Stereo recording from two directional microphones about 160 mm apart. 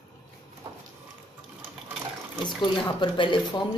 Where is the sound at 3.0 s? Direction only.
30° left (ahead or behind).